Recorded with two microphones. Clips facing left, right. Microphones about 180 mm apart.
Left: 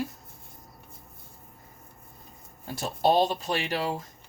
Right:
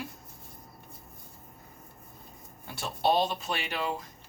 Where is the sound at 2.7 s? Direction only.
40° left (ahead or behind).